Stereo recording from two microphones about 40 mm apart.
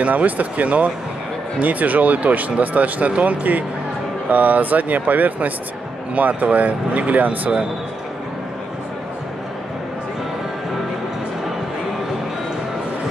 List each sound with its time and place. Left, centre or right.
0.0 s speech: right